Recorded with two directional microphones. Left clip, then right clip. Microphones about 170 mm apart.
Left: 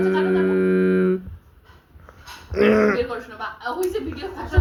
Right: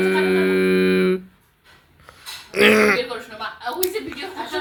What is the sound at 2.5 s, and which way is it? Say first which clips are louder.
Speech: right 3 dB; 20° right (ahead or behind).